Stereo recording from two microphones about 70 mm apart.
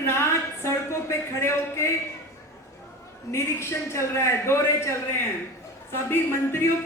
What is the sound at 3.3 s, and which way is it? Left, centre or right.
Speech, left.